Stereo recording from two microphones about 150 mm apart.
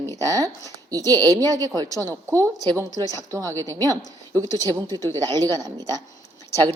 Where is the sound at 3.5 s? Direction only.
15° left (ahead or behind).